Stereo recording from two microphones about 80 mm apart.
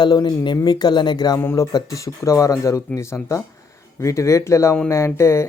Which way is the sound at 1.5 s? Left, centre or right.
Left.